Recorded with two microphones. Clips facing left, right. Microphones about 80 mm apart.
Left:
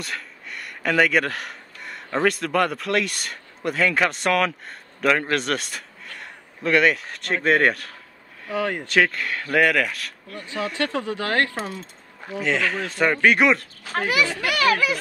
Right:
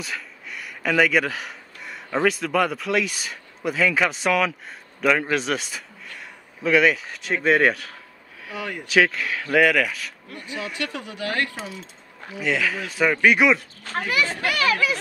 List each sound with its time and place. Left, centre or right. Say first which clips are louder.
0.0 s speech: even; centre
10.4 s speech: left 4 dB; centre
11.2 s speech: left 1 dB; left
11.8 s speech: left 1 dB; centre
14.0 s a child's voice: left 1 dB; left
14.5 s a child's voice: left 2 dB; left